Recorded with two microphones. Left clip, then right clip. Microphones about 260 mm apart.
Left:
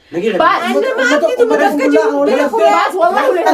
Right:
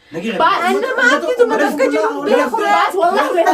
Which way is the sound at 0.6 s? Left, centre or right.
Centre.